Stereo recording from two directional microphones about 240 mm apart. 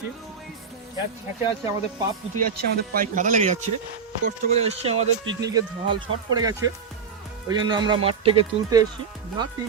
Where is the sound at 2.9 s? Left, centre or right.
Right.